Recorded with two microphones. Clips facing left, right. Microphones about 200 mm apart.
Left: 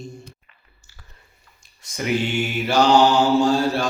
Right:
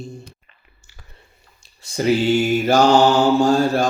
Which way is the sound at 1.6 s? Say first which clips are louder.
Right 7 dB; 30° right (ahead or behind).